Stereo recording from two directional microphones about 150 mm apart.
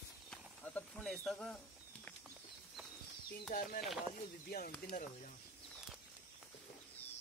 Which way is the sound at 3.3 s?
90° left.